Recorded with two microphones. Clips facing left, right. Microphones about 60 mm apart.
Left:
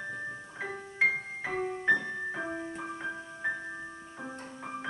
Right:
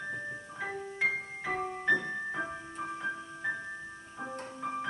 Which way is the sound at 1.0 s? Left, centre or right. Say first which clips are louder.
Left 4 dB; centre.